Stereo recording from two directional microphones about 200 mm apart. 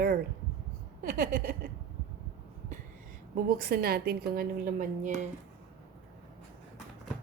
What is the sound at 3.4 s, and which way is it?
A woman's voice, 50° right (ahead or behind).